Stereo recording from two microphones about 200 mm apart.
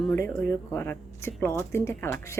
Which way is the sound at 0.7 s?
10° left (ahead or behind).